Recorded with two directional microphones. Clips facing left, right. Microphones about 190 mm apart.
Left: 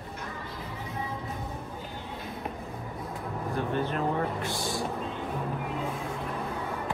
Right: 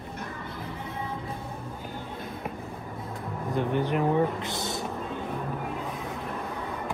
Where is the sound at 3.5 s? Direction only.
15° right (ahead or behind).